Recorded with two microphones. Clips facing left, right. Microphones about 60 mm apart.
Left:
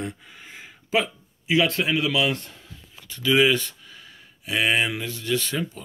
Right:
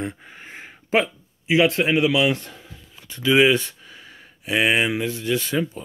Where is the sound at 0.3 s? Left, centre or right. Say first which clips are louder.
Right 4 dB; right.